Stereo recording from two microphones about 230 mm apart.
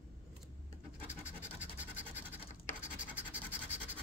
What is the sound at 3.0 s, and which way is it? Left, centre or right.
Scratch, centre.